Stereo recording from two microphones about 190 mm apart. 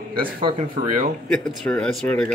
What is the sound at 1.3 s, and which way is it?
Speech, 5° left (ahead or behind).